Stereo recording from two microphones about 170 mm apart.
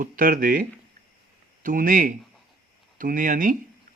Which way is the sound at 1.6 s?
55° right (ahead or behind).